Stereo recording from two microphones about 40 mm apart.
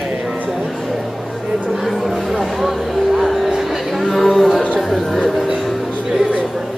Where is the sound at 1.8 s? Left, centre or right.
Centre.